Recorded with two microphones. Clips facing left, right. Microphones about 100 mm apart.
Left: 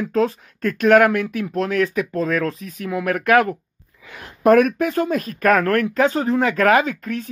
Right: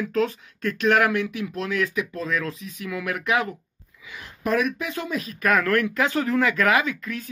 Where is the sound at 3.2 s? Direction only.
50° left (ahead or behind).